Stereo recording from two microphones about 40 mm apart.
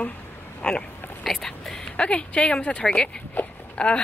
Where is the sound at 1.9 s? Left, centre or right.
Left.